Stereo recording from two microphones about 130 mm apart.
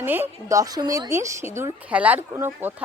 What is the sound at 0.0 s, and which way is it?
A woman's voice, 15° right (ahead or behind).